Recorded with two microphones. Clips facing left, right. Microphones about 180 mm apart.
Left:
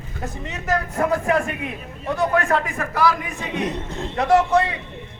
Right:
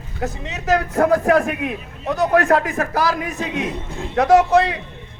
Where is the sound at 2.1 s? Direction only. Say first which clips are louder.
Right 4 dB; 40° right (ahead or behind).